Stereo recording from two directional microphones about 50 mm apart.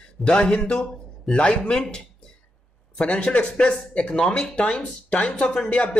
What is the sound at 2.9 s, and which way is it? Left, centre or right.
Speech, left.